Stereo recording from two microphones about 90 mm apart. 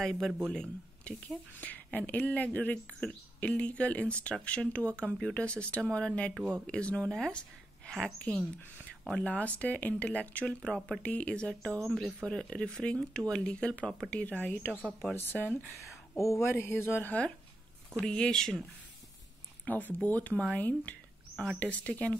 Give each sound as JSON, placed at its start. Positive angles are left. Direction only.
{"t": 0.0, "sound": "speech", "side_deg": 0}
{"t": 14.9, "sound": "speech", "side_deg": -5}
{"t": 15.3, "sound": "speech", "side_deg": 20}
{"t": 16.2, "sound": "speech", "side_deg": 30}
{"t": 19.6, "sound": "speech", "side_deg": 20}